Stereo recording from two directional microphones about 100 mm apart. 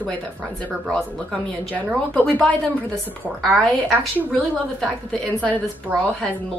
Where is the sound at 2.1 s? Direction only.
15° left (ahead or behind).